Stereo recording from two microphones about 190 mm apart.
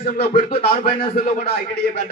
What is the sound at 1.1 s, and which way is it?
Speech, 50° left (ahead or behind).